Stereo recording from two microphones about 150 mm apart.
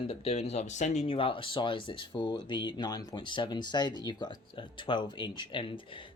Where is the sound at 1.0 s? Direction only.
35° left (ahead or behind).